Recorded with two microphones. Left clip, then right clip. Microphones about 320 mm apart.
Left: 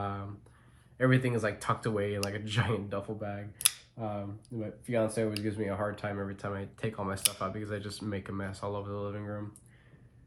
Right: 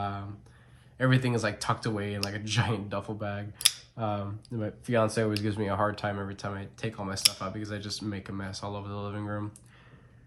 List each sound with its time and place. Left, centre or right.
0.0 s a sound: centre
0.9 s speech: centre
3.2 s speech: centre